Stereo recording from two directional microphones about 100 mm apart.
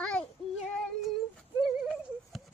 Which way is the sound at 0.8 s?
5° left (ahead or behind).